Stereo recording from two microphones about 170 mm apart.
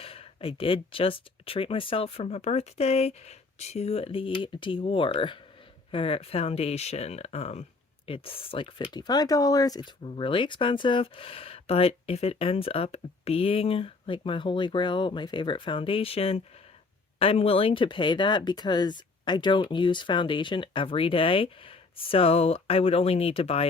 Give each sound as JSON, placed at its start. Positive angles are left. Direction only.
{"t": 0.0, "sound": "speech", "side_deg": 35}